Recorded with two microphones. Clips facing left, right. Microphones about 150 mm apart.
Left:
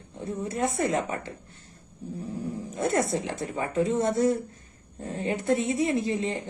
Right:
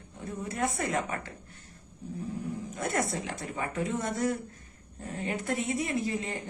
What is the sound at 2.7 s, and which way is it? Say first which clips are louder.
A woman's voice: left 6 dB; 25° left (ahead or behind).